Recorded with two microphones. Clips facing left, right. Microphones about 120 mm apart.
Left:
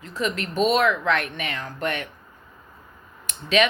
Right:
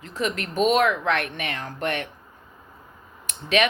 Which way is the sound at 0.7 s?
40° right (ahead or behind).